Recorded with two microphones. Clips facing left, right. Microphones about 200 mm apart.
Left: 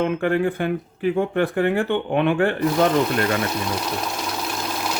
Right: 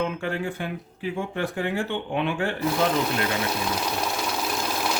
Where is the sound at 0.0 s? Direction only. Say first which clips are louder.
Left 7 dB; 55° left (ahead or behind).